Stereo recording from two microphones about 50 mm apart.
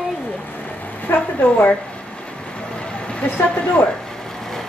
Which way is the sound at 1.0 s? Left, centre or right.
Left.